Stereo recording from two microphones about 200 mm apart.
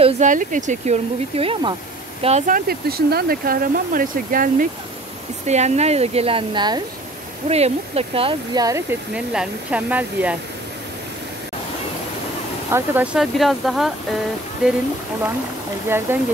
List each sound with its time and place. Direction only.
0.0 s speech: 40° right (ahead or behind)
2.2 s speech: 35° right (ahead or behind); by 8.8 s 20° right (ahead or behind)
9.1 s speech: 5° right (ahead or behind)
12.7 s speech: 10° right (ahead or behind)
16.1 s speech: 10° right (ahead or behind)